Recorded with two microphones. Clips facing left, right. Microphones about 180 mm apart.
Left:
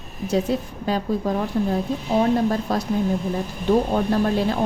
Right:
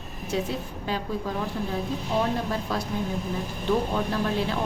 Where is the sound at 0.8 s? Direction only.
40° left (ahead or behind).